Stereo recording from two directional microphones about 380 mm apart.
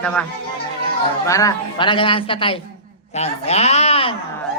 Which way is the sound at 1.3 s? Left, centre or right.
Centre.